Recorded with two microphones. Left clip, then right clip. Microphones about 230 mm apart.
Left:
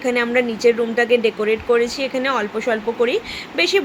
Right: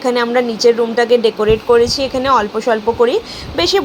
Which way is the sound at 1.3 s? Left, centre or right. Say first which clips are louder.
Right 6 dB; centre.